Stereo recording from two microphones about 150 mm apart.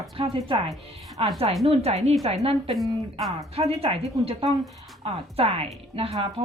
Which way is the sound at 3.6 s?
40° right (ahead or behind).